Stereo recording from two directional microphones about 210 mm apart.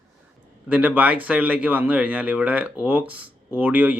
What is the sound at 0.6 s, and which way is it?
A man's voice, 5° right (ahead or behind).